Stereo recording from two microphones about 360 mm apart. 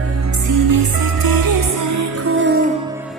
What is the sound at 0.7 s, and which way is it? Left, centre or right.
Music, right.